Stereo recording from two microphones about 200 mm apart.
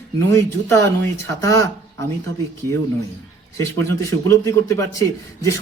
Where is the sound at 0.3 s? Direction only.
15° left (ahead or behind).